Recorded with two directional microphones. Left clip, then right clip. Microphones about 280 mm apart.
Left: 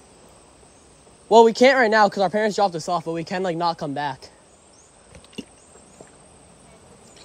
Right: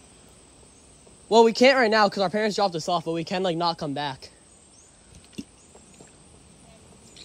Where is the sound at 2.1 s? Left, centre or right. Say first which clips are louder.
Left 4 dB; centre.